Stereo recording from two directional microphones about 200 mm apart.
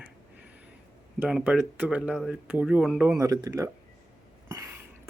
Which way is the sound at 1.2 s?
5° right (ahead or behind).